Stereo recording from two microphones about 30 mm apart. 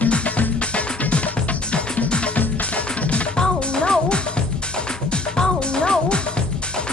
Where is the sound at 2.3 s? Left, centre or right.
Left.